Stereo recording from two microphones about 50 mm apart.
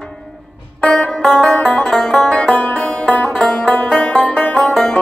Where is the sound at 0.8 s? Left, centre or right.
Centre.